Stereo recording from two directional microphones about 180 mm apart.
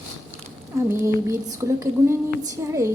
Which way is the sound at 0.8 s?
15° right (ahead or behind).